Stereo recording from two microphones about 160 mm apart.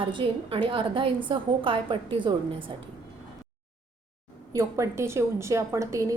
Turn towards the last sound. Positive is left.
turn(degrees=-20)  # may be behind; listen again after turning